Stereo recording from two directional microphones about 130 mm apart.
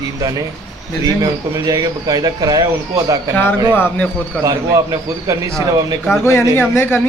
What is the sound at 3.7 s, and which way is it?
Speech, 10° left (ahead or behind).